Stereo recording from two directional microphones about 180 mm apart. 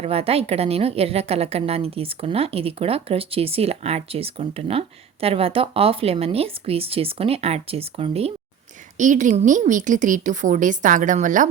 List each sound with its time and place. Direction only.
0.0 s a woman's voice: 35° right (ahead or behind)
9.0 s a woman's voice: 45° right (ahead or behind)